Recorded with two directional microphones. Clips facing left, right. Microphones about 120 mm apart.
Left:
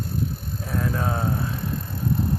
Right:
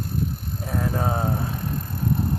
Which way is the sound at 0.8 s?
30° right (ahead or behind).